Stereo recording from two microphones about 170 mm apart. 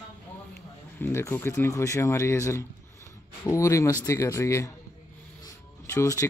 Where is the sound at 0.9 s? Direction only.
15° left (ahead or behind).